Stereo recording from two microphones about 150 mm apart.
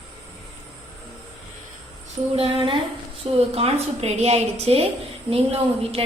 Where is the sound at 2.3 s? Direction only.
40° right (ahead or behind).